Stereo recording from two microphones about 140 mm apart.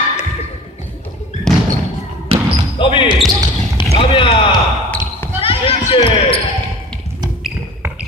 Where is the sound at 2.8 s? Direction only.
35° left (ahead or behind).